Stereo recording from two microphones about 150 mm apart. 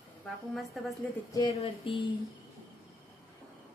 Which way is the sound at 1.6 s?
35° left (ahead or behind).